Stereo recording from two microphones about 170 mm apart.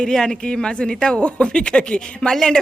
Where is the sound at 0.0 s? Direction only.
5° left (ahead or behind).